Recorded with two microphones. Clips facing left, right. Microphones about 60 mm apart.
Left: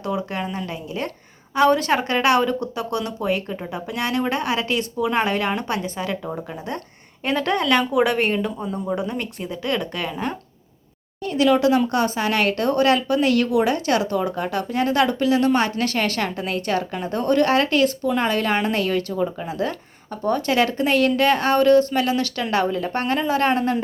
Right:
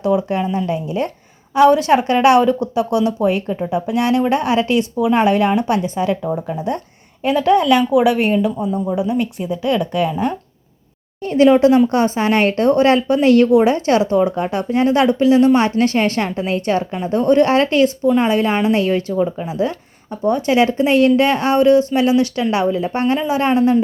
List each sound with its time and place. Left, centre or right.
0.0 s speech: right
4.9 s speech: centre
6.2 s speech: centre
11.2 s a woman's voice: right
19.2 s speech: centre
19.5 s speech: centre